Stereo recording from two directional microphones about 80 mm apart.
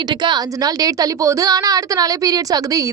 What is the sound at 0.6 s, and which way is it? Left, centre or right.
A woman's voice, right.